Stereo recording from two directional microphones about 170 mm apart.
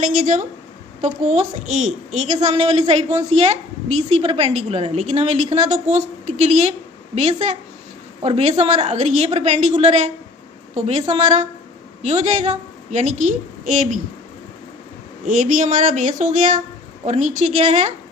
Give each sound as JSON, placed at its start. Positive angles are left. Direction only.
{"t": 0.0, "sound": "a woman's voice", "side_deg": -50}
{"t": 15.2, "sound": "a woman's voice", "side_deg": -50}